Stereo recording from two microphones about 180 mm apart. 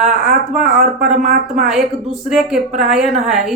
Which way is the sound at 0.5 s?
Centre (ahead or behind).